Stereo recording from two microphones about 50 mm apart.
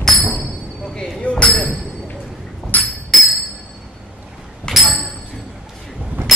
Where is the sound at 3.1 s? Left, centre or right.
Centre.